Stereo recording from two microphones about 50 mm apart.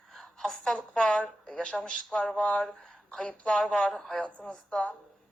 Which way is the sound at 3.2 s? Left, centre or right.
Left.